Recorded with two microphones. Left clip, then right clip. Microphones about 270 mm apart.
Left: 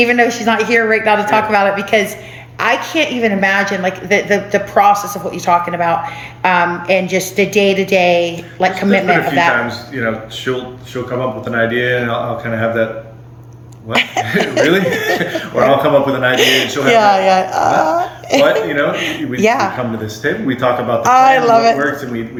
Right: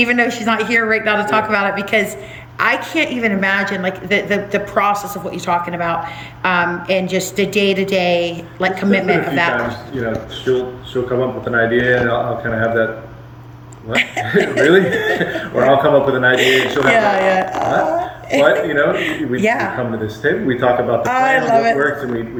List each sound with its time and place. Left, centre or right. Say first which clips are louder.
0.0 s a woman's voice: left 3 dB; centre
10.5 s speech: right 4 dB; centre
13.9 s a woman's voice: left 1 dB; centre